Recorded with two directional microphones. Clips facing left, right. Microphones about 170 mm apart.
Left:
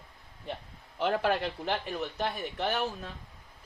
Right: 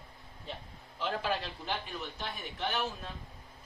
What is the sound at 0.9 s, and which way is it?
Speech, 65° left (ahead or behind).